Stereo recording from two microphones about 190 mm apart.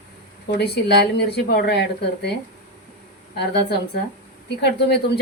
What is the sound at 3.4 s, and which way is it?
Speech, 60° left (ahead or behind).